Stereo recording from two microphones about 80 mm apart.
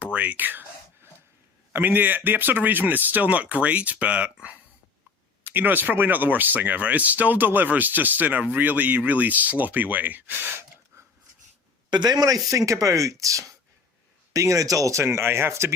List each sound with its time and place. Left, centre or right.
0.0 s speech: centre
1.7 s speech: right
11.9 s speech: right
12.5 s speech: right